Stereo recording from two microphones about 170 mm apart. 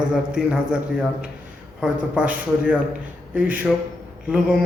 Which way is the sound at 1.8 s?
5° right (ahead or behind).